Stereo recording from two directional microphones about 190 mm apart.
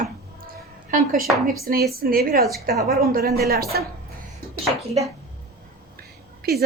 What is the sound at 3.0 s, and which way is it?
Speech, 50° right (ahead or behind).